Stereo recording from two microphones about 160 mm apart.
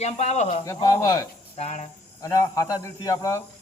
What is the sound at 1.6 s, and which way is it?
Speech, 45° left (ahead or behind).